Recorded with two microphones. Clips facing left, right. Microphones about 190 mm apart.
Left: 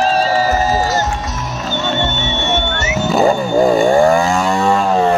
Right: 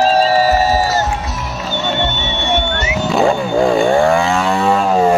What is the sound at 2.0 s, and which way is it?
Music, 15° right (ahead or behind).